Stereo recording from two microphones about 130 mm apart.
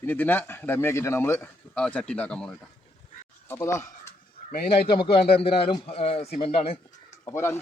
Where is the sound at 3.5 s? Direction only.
20° left (ahead or behind).